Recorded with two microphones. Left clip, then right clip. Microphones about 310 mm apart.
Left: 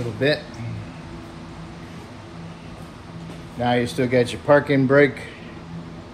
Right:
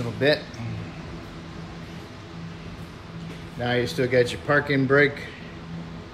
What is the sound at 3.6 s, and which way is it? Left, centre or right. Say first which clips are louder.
Speech: left 3 dB; centre.